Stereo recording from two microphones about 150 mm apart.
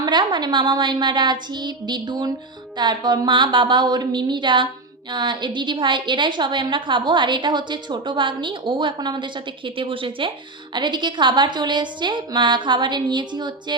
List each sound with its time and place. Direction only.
0.0 s a woman's voice: 30° right (ahead or behind)